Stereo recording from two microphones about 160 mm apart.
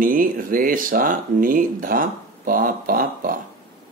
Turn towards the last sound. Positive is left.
turn(degrees=-60)  # may be behind; listen again after turning